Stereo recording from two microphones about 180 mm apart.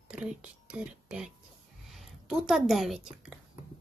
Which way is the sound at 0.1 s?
5° right (ahead or behind).